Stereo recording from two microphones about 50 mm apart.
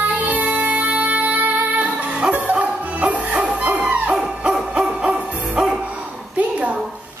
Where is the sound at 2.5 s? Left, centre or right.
Right.